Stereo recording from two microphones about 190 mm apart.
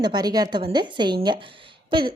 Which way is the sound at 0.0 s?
20° right (ahead or behind).